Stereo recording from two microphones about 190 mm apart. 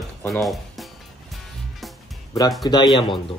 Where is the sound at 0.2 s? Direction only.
Centre (ahead or behind).